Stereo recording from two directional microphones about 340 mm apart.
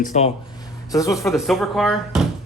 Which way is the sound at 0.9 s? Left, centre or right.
Centre.